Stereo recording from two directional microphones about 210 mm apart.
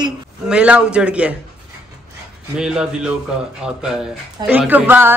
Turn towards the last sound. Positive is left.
turn(degrees=-10)  # may be behind; listen again after turning